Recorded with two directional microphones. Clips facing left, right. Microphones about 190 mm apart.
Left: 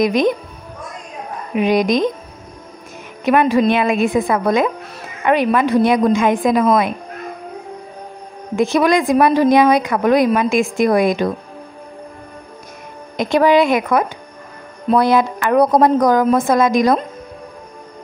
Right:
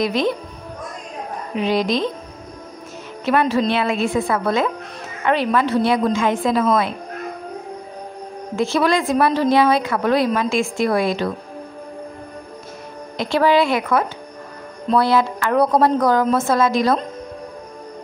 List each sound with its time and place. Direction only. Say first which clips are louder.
0.0 s a woman's voice: left 4 dB; 15° left (ahead or behind)
1.5 s a woman's voice: left 4 dB; 15° left (ahead or behind)
3.3 s a woman's voice: left 4 dB; 15° left (ahead or behind)
8.5 s a woman's voice: left 4 dB; 15° left (ahead or behind)
13.2 s a woman's voice: left 3 dB; 15° left (ahead or behind)